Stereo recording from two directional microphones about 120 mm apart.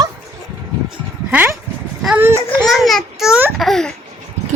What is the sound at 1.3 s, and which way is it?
Speech, 15° right (ahead or behind).